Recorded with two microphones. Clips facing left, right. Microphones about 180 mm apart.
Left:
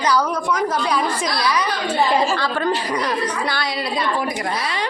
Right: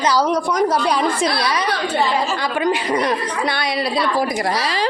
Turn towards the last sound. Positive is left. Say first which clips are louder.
# right 1 dB
turn(degrees=-25)  # may be behind; listen again after turning